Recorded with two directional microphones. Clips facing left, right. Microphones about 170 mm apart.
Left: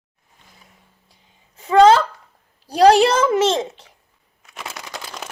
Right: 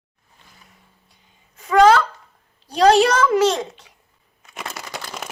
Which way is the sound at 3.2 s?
25° left (ahead or behind).